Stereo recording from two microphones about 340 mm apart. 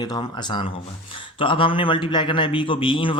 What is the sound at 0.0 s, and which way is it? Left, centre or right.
A man's voice, centre.